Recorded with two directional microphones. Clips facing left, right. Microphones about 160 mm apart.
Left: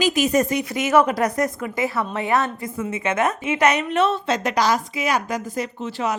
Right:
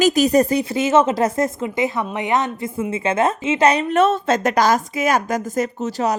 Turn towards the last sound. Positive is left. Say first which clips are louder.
# right 4 dB
turn(degrees=-40)  # may be behind; listen again after turning